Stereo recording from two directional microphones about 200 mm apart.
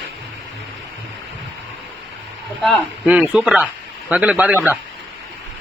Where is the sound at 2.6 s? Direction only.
Centre (ahead or behind).